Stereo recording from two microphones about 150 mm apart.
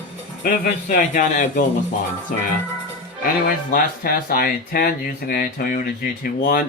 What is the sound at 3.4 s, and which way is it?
Speech, 70° left (ahead or behind).